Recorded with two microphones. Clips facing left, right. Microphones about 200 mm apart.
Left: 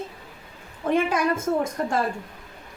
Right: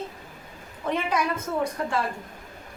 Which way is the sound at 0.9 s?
50° left (ahead or behind).